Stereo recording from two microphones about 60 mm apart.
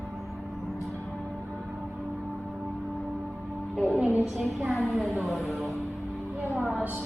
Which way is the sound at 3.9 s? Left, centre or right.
Right.